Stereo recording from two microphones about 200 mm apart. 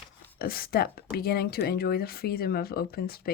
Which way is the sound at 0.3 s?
50° left (ahead or behind).